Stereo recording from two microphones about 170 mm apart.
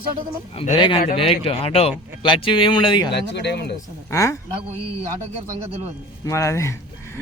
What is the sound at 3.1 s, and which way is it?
Speech, 85° left.